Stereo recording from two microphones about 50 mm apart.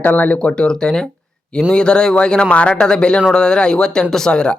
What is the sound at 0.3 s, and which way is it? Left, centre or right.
A man's voice, centre.